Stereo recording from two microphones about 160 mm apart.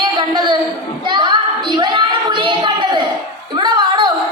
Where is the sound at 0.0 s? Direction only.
30° right (ahead or behind).